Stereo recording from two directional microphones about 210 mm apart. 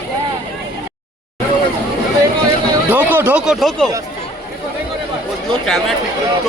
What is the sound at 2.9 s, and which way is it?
Speech, 10° right (ahead or behind).